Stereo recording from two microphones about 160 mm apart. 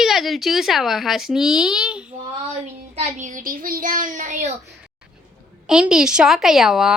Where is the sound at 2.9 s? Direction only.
50° right (ahead or behind).